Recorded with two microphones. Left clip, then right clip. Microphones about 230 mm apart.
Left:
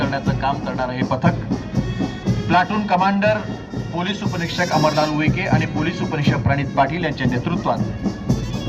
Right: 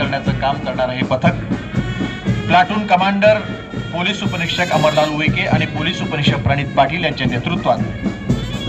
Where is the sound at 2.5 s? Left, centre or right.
Right.